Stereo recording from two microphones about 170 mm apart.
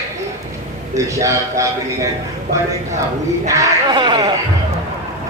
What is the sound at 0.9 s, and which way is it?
Speech, 20° right (ahead or behind).